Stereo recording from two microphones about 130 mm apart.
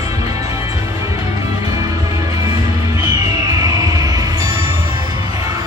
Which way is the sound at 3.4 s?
30° right (ahead or behind).